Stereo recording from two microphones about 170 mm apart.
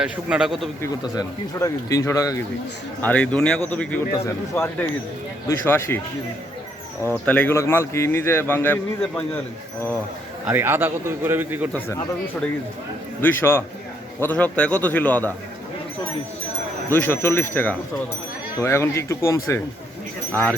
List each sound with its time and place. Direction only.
0.0 s a man's voice: 5° right (ahead or behind)
0.8 s speech: 20° left (ahead or behind)
3.0 s speech: 10° left (ahead or behind)
7.0 s speech: 10° left (ahead or behind)
10.4 s a man's voice: 10° right (ahead or behind)
13.2 s speech: 15° left (ahead or behind)
16.9 s speech: 10° left (ahead or behind)